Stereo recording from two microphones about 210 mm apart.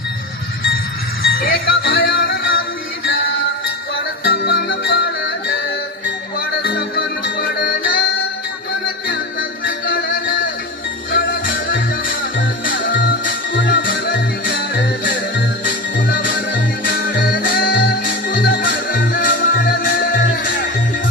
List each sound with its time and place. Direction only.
1.2 s music: 45° left (ahead or behind)
4.2 s music: 45° left (ahead or behind)
6.6 s music: 45° left (ahead or behind)
9.0 s music: 40° left (ahead or behind)